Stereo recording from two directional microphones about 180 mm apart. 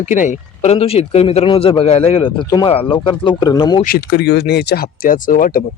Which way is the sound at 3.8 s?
55° left (ahead or behind).